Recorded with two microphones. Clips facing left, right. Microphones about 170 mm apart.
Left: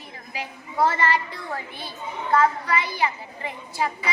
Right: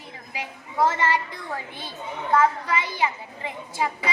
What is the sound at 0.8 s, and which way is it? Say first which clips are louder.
Speech: left 1 dB; 20° right (ahead or behind).